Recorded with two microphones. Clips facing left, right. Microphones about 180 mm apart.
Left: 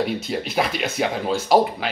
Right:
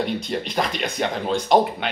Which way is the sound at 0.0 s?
5° left (ahead or behind).